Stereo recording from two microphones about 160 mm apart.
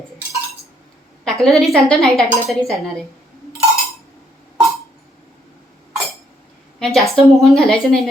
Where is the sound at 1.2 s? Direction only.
Centre (ahead or behind).